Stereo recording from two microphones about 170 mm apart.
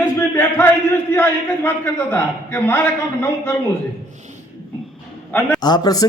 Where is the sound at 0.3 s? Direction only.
15° left (ahead or behind).